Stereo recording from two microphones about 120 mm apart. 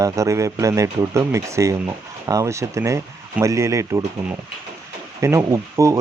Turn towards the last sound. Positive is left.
turn(degrees=-25)  # may be behind; listen again after turning